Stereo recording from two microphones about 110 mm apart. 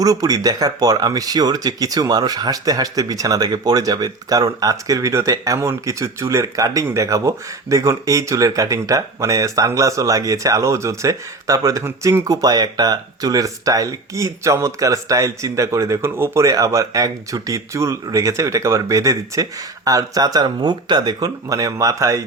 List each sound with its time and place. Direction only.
0.0 s speech: 35° right (ahead or behind)
16.4 s speech: 30° right (ahead or behind)